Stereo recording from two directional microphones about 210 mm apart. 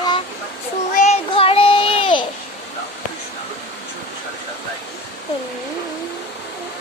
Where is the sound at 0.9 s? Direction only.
30° left (ahead or behind).